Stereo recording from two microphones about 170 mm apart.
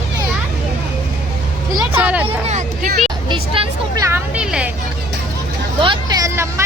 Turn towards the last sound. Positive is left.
turn(degrees=-15)  # may be behind; listen again after turning